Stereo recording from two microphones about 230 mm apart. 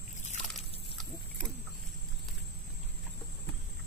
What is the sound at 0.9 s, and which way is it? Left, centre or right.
Pig, centre.